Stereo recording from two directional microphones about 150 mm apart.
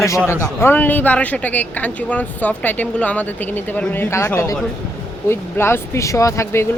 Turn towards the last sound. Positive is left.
turn(degrees=20)  # may be behind; listen again after turning